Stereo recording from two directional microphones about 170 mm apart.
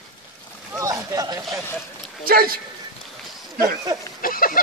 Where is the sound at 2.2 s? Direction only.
60° right (ahead or behind).